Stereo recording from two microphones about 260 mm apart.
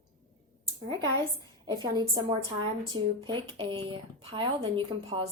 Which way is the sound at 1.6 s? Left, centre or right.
Centre.